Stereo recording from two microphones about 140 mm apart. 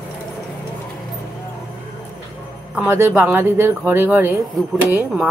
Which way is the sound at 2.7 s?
15° right (ahead or behind).